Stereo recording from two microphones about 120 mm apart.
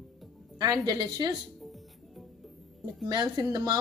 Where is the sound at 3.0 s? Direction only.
35° right (ahead or behind).